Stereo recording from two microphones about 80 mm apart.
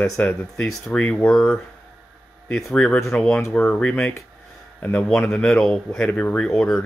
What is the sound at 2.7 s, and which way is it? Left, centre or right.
Speech, centre.